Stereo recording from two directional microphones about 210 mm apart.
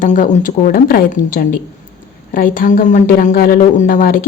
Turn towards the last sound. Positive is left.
turn(degrees=40)  # may be behind; listen again after turning